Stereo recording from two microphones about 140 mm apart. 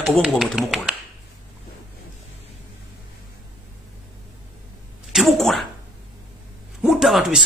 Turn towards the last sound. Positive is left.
turn(degrees=0)  # may be behind; listen again after turning